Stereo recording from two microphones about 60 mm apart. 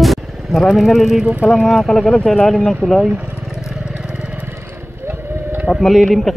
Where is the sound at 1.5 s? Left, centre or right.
Centre.